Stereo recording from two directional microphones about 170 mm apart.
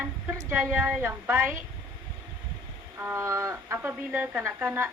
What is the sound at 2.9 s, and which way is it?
Speech, 15° right (ahead or behind).